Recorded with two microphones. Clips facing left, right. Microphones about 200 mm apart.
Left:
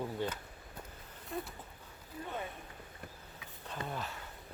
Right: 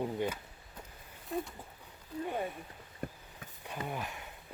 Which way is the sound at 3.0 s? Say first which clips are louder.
Right 11 dB; 50° right (ahead or behind).